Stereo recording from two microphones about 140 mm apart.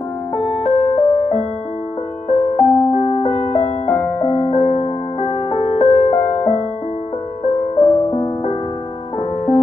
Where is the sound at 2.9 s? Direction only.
30° left (ahead or behind).